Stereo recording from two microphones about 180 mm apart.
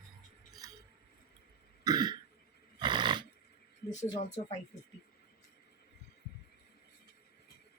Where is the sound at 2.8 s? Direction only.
25° right (ahead or behind).